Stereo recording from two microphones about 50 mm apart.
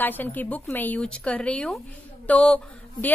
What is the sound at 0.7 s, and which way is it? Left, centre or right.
Speech, left.